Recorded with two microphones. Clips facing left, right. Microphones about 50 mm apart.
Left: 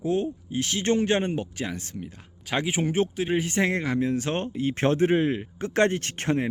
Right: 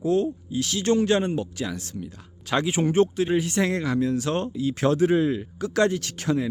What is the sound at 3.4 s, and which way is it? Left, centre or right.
Speech, left.